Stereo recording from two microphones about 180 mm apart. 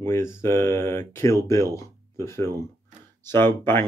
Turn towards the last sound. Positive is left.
turn(degrees=10)  # may be behind; listen again after turning